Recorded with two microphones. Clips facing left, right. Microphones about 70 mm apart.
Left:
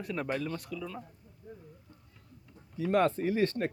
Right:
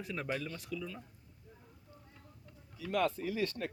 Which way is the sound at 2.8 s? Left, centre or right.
Left.